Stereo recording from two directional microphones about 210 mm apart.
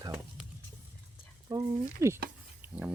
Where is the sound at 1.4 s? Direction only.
15° right (ahead or behind).